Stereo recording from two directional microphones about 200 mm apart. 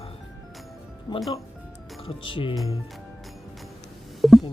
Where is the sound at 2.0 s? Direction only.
25° left (ahead or behind).